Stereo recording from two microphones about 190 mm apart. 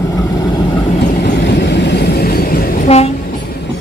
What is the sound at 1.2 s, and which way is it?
Vehicle, 65° left (ahead or behind).